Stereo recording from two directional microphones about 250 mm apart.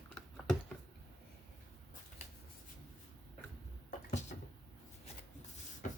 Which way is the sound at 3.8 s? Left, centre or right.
Left.